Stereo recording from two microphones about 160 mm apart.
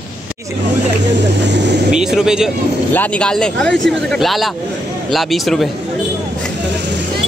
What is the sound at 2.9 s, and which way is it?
Speech, 10° left (ahead or behind).